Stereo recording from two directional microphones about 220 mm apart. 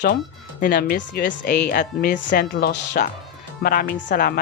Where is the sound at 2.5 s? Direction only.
50° left (ahead or behind).